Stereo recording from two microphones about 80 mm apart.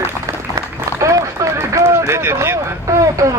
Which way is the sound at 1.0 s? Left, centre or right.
Right.